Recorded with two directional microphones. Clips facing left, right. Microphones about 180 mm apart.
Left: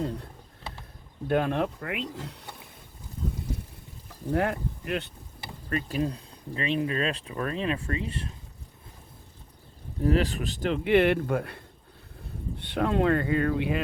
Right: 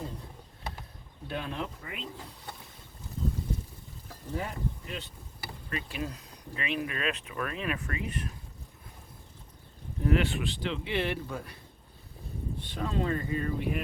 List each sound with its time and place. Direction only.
1.3 s speech: 60° left (ahead or behind)
4.3 s speech: 70° left (ahead or behind)
5.6 s speech: 40° left (ahead or behind)
10.0 s speech: 35° left (ahead or behind); by 13.8 s 90° left